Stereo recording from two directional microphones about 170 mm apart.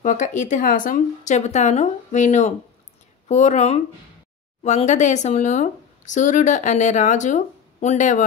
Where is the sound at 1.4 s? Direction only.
45° left (ahead or behind).